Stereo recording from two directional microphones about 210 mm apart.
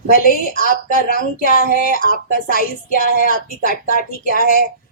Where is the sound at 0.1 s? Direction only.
45° left (ahead or behind).